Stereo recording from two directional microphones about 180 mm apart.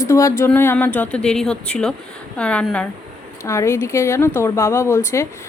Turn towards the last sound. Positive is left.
turn(degrees=15)  # may be behind; listen again after turning